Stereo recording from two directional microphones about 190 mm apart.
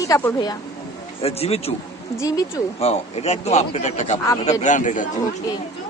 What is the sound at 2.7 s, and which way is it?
Speech, 35° left (ahead or behind).